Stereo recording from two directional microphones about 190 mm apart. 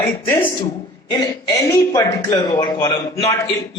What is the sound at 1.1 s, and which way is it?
A man's voice, 20° left (ahead or behind).